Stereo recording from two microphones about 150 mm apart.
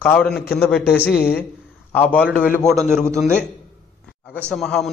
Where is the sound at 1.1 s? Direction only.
90° left.